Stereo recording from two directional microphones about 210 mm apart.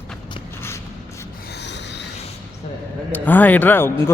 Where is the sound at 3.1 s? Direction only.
10° left (ahead or behind).